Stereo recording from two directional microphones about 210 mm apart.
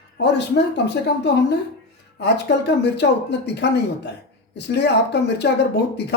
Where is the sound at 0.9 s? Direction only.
55° left (ahead or behind).